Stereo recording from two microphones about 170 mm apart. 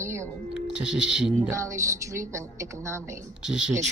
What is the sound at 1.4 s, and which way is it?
A woman's voice, 20° right (ahead or behind).